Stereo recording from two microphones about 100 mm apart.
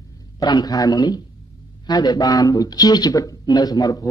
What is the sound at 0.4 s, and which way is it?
A man's voice, 40° left (ahead or behind).